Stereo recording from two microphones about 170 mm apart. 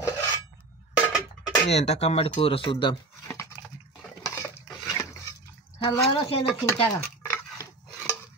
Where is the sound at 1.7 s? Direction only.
40° left (ahead or behind).